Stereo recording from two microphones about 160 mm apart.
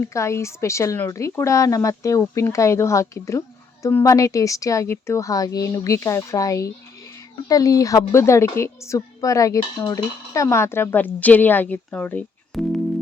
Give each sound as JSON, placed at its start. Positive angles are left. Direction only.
{"t": 0.0, "sound": "a woman's voice", "side_deg": 20}